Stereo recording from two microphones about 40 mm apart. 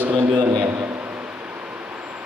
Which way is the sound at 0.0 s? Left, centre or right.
Right.